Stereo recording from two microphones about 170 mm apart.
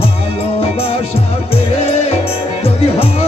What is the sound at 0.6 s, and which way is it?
Music, 35° left (ahead or behind).